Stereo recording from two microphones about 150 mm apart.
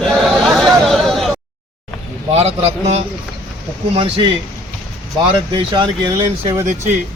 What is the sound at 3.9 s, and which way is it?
Speech, 35° right (ahead or behind).